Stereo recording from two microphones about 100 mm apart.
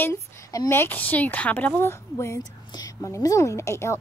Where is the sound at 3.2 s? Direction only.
35° left (ahead or behind).